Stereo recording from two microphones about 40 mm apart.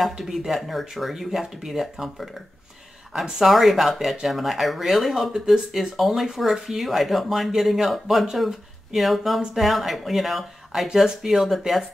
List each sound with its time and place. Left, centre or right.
0.5 s speech: centre
3.4 s speech: centre